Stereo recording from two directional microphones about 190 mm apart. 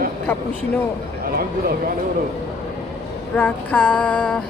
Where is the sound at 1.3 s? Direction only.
50° right (ahead or behind).